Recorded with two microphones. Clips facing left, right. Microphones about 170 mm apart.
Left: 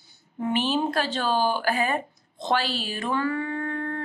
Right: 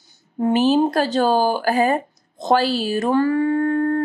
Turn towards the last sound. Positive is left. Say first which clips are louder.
# right 11 dB
turn(degrees=-45)  # may be behind; listen again after turning